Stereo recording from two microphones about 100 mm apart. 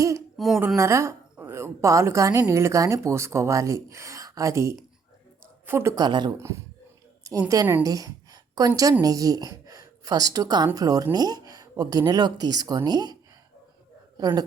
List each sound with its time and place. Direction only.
0.3 s a woman's voice: centre (ahead or behind)
0.8 s a woman's voice: 30° right (ahead or behind)
6.0 s speech: 45° right (ahead or behind)
6.3 s a woman's voice: 30° right (ahead or behind)
14.2 s a woman's voice: 40° right (ahead or behind)